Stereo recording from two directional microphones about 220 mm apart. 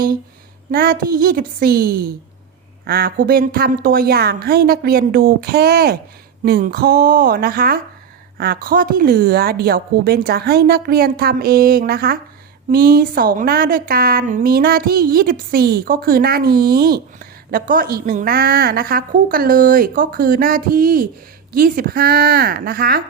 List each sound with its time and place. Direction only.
0.7 s a woman's voice: 40° right (ahead or behind)